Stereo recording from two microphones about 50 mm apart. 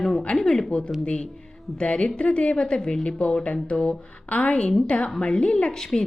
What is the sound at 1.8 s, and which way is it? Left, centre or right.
A woman's voice, left.